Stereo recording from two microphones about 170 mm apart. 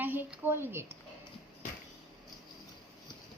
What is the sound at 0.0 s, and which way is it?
Speech, 10° right (ahead or behind).